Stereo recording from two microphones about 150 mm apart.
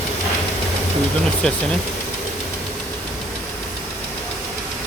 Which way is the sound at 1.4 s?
5° left (ahead or behind).